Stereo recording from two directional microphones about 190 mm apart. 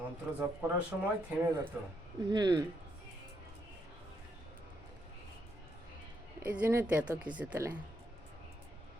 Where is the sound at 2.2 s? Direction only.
20° right (ahead or behind).